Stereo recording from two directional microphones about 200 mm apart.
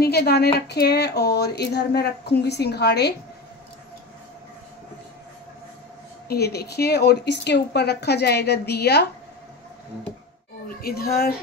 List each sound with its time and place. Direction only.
0.0 s speech: 55° left (ahead or behind)
6.2 s speech: 55° left (ahead or behind)
10.7 s speech: 50° left (ahead or behind)